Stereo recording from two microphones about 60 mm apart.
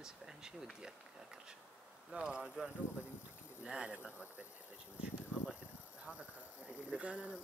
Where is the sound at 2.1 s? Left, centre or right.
Centre.